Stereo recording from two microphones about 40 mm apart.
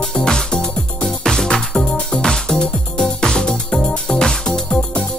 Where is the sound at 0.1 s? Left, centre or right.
Left.